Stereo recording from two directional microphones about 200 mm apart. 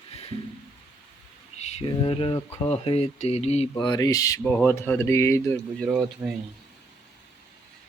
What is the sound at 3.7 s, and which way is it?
Speech, 20° left (ahead or behind).